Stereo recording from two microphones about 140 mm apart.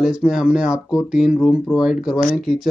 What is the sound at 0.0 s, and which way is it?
Speech, 5° right (ahead or behind).